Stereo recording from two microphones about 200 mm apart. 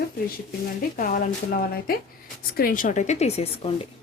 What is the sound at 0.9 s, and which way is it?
A woman's voice, 45° left (ahead or behind).